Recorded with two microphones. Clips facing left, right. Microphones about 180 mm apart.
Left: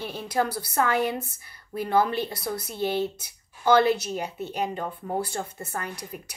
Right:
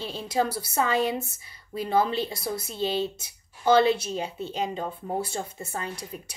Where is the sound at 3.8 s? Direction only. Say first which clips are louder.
Even; 25° right (ahead or behind).